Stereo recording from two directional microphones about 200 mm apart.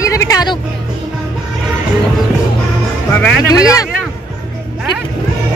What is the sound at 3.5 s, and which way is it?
Speech, 15° left (ahead or behind).